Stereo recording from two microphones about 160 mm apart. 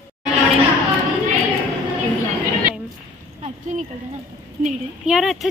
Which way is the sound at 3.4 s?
45° right (ahead or behind).